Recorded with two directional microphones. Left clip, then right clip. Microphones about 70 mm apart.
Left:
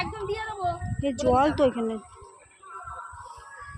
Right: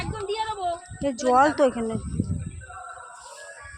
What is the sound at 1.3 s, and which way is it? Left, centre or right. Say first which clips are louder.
Speech: right 3 dB; centre.